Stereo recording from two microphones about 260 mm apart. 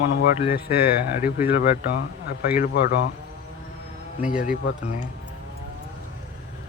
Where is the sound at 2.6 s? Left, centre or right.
Left.